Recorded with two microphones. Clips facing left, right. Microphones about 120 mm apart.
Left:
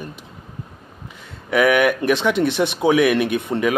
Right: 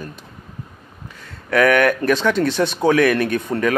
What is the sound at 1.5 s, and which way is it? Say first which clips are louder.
Speech: right 1 dB; 15° left (ahead or behind).